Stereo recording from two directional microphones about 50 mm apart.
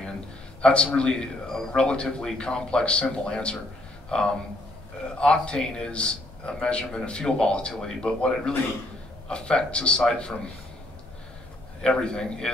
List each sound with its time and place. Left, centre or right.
0.6 s a man's voice: centre
1.8 s a man's voice: centre
11.8 s speech: centre